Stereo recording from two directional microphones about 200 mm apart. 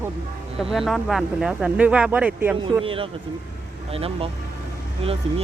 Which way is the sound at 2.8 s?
25° right (ahead or behind).